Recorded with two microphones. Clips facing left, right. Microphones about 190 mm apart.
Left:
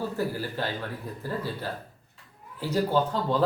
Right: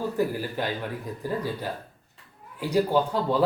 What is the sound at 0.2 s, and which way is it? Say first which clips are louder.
A man's voice: right 3 dB; 15° right (ahead or behind).